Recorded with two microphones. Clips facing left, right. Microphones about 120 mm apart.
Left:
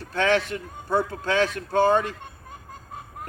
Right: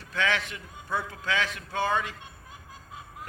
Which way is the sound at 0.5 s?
45° left (ahead or behind).